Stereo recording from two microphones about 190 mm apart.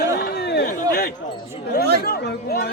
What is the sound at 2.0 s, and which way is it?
Chatter, 60° left (ahead or behind).